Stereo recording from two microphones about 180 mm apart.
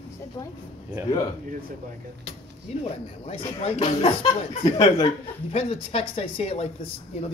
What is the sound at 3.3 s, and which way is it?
A woman's voice, 35° left (ahead or behind).